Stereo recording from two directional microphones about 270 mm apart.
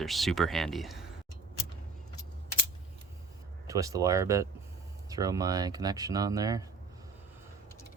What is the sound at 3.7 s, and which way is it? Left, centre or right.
Speech, centre.